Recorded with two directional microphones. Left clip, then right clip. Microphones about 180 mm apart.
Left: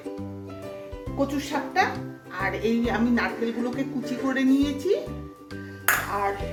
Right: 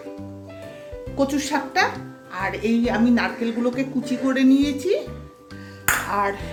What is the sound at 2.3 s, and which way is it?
A woman's voice, 15° right (ahead or behind).